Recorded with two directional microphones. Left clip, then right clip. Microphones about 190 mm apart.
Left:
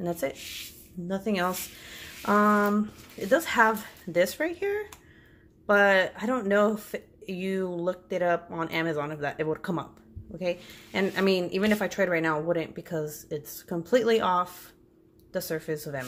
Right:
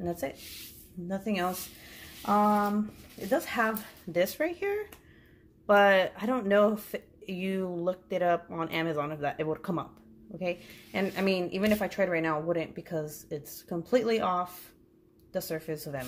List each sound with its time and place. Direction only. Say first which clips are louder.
0.0 s speech: left 4 dB; 20° left (ahead or behind)
3.3 s speech: left 6 dB; 25° left (ahead or behind)
4.1 s speech: left 3 dB; 10° left (ahead or behind)